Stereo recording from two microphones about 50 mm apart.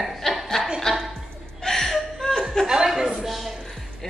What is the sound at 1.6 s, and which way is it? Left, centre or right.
Chuckle, centre.